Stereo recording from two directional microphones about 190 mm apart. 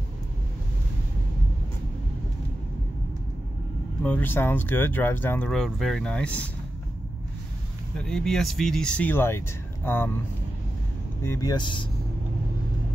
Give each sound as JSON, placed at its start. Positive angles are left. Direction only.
{"t": 4.0, "sound": "speech", "side_deg": 10}
{"t": 8.0, "sound": "speech", "side_deg": 5}
{"t": 11.2, "sound": "speech", "side_deg": 15}